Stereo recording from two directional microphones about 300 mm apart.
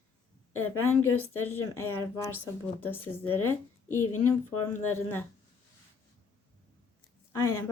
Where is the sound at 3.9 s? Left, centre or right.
Left.